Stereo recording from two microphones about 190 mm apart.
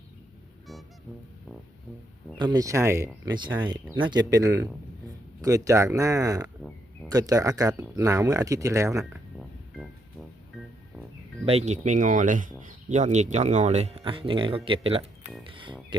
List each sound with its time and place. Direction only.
2.4 s speech: 20° right (ahead or behind)
9.4 s music: centre (ahead or behind)
11.4 s speech: 35° right (ahead or behind)
15.4 s music: 25° right (ahead or behind)